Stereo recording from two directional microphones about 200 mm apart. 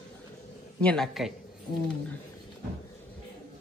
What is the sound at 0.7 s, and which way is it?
Speech, 5° left (ahead or behind).